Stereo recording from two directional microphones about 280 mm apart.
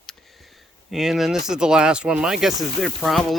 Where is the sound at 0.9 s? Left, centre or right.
Centre.